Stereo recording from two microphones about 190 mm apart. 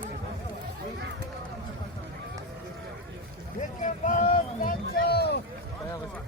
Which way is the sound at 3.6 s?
40° left (ahead or behind).